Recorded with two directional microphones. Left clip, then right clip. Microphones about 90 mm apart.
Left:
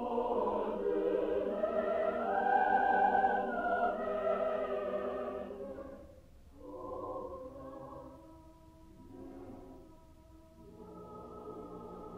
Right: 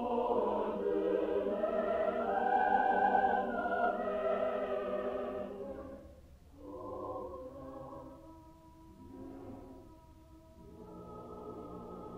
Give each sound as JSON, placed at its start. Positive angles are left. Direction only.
{"t": 0.0, "sound": "music", "side_deg": -35}
{"t": 2.5, "sound": "music", "side_deg": -10}
{"t": 3.0, "sound": "theremin", "side_deg": -15}
{"t": 3.3, "sound": "music", "side_deg": -25}
{"t": 6.8, "sound": "a sound", "side_deg": -15}
{"t": 11.1, "sound": "music", "side_deg": -15}